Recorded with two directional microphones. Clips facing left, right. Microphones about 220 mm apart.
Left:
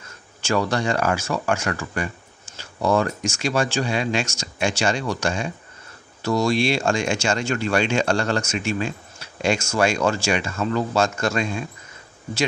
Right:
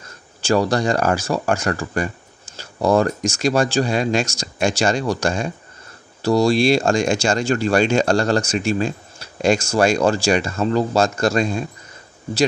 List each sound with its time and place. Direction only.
0.4 s speech: 35° right (ahead or behind)